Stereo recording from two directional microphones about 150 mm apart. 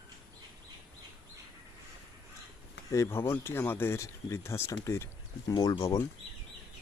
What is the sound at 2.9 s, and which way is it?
Speech, 20° left (ahead or behind).